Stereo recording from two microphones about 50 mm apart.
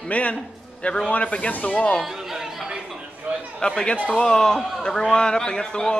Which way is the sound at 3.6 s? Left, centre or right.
Centre.